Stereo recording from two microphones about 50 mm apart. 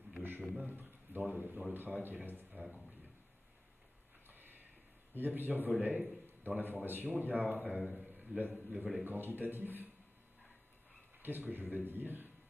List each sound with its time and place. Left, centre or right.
0.6 s a man's voice: right
4.3 s a sound: right
5.1 s a man's voice: right
8.0 s a sound: right
8.4 s a man's voice: right
9.0 s a man's voice: right
11.2 s a man's voice: right